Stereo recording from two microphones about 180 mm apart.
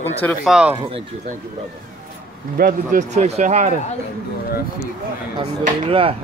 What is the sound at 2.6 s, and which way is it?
A man's voice, 50° right (ahead or behind).